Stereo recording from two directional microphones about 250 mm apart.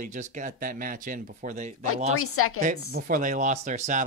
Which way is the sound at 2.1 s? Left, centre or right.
Left.